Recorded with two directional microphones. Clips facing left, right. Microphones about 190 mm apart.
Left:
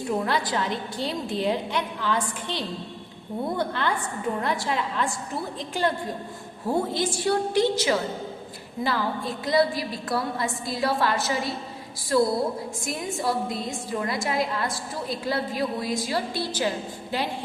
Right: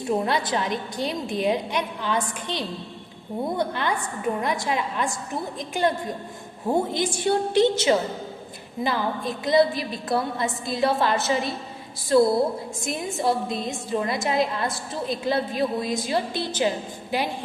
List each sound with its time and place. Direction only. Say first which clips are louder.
0.1 s a woman's voice: right 2 dB; 20° right (ahead or behind)